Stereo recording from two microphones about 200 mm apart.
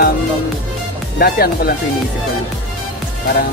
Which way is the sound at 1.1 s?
50° left (ahead or behind).